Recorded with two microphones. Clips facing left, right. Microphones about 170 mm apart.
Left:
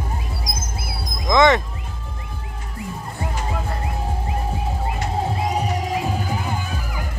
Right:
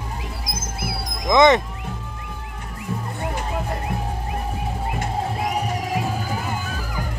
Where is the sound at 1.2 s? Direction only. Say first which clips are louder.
Right 1 dB; 20° right (ahead or behind).